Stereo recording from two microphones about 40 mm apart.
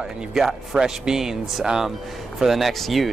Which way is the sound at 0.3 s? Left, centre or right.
Centre.